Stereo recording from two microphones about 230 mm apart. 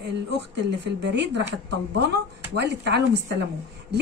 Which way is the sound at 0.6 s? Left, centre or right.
Right.